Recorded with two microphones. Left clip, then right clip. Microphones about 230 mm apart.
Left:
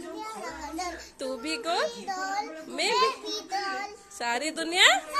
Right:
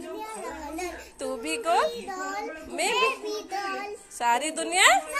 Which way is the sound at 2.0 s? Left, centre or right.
Left.